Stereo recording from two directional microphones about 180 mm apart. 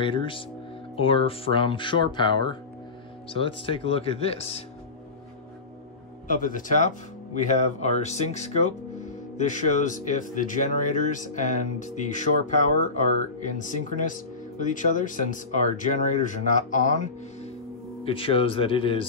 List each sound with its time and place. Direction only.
0.0 s speech: 25° left (ahead or behind)
6.2 s speech: 50° left (ahead or behind)
18.0 s speech: 30° left (ahead or behind)